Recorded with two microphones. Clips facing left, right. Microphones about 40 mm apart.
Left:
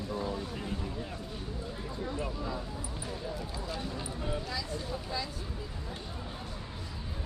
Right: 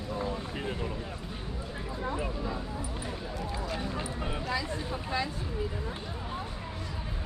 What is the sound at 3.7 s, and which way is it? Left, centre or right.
Speech, right.